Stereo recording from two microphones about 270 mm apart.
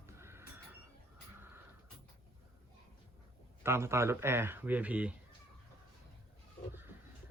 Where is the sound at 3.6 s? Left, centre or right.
Centre.